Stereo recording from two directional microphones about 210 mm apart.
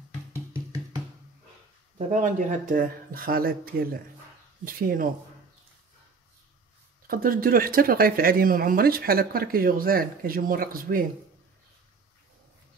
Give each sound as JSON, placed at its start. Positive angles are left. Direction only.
{"t": 0.3, "sound": "music", "side_deg": -15}
{"t": 2.1, "sound": "speech", "side_deg": -40}
{"t": 7.1, "sound": "speech", "side_deg": -45}